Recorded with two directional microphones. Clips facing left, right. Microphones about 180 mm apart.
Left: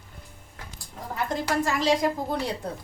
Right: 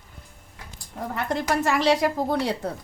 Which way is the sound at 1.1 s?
65° right (ahead or behind).